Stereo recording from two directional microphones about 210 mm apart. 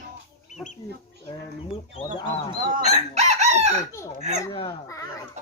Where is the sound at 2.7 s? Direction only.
30° right (ahead or behind).